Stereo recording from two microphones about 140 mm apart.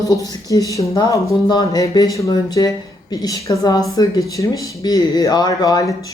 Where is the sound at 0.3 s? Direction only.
25° left (ahead or behind).